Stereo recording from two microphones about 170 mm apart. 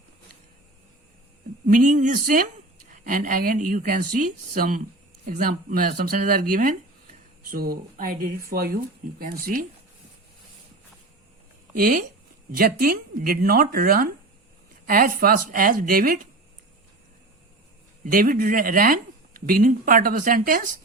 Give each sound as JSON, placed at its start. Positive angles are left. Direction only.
{"t": 1.6, "sound": "speech", "side_deg": -50}
{"t": 11.7, "sound": "speech", "side_deg": -55}
{"t": 18.0, "sound": "speech", "side_deg": -55}